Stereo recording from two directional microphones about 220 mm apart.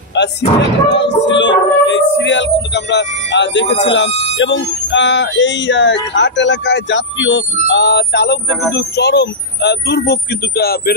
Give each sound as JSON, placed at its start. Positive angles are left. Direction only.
{"t": 0.2, "sound": "speech", "side_deg": 50}